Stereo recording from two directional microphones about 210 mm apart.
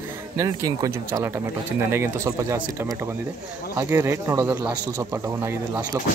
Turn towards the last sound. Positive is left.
turn(degrees=-15)  # may be behind; listen again after turning